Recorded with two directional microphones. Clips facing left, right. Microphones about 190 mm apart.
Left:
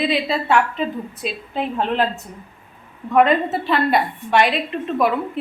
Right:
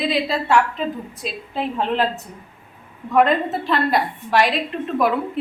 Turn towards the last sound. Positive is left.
turn(degrees=0)  # may be behind; listen again after turning